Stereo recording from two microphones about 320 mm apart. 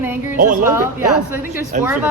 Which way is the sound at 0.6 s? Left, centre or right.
Centre.